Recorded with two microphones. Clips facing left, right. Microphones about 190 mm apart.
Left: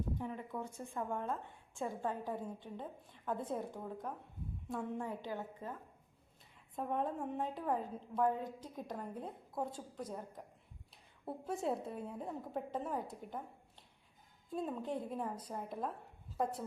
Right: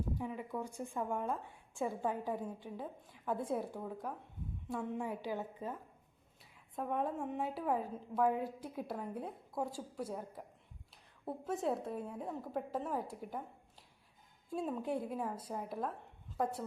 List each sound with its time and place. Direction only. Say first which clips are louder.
0.2 s a woman's voice: right 2 dB; 10° right (ahead or behind)
6.7 s a woman's voice: right 1 dB; 5° right (ahead or behind)